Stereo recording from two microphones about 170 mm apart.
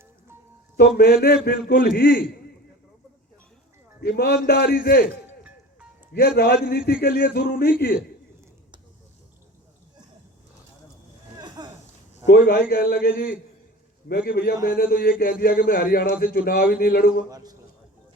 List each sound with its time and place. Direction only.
0.8 s speech: 65° left (ahead or behind)
4.0 s a man's voice: 70° left (ahead or behind)
5.2 s music: 10° right (ahead or behind)
6.1 s speech: 65° left (ahead or behind)
11.3 s a sound: 25° right (ahead or behind)
12.3 s speech: 70° left (ahead or behind)
17.2 s a man's voice: 20° right (ahead or behind)